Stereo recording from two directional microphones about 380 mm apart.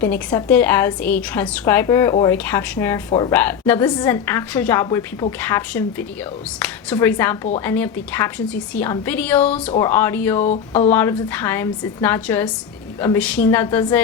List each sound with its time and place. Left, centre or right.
0.0 s a woman's voice: centre
10.4 s a woman's voice: centre
10.9 s a woman's voice: centre